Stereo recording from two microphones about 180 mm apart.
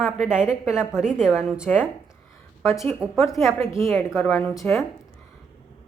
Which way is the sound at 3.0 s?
5° right (ahead or behind).